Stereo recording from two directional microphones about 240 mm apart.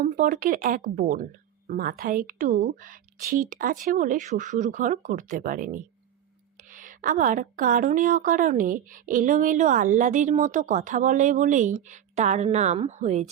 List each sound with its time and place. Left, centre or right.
0.0 s a woman's voice: right